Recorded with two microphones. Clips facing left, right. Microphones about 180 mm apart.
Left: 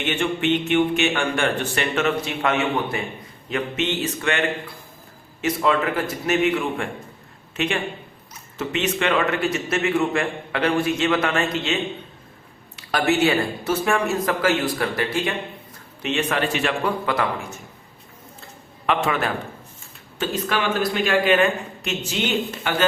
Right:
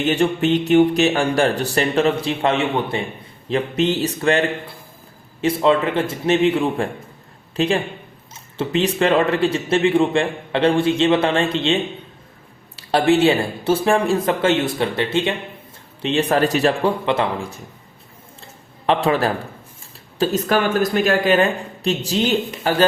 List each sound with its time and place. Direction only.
0.0 s a man's voice: 35° right (ahead or behind)
18.9 s speech: 35° right (ahead or behind)